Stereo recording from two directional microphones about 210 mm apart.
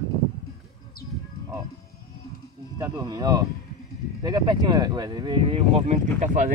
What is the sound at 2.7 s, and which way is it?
Speech, 15° right (ahead or behind).